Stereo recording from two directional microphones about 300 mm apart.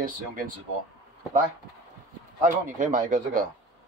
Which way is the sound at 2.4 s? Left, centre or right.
Right.